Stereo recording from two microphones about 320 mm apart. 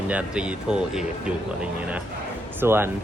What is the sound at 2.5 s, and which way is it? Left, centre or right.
Speech, centre.